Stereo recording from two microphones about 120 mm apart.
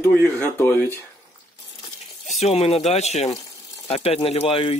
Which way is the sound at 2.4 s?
60° left (ahead or behind).